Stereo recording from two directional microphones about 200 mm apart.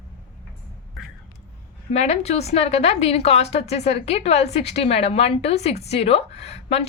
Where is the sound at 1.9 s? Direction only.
35° left (ahead or behind).